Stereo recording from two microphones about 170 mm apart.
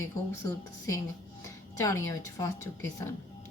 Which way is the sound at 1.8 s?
20° left (ahead or behind).